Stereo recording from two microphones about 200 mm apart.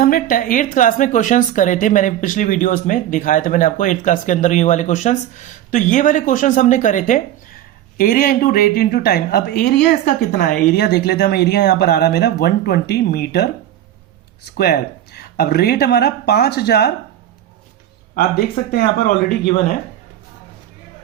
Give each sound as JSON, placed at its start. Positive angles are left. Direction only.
{"t": 0.0, "sound": "a woman's voice", "side_deg": 45}
{"t": 14.5, "sound": "speech", "side_deg": 55}
{"t": 18.1, "sound": "speech", "side_deg": 50}